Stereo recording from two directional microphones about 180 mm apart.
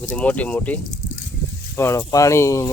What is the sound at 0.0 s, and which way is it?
Speech, 10° left (ahead or behind).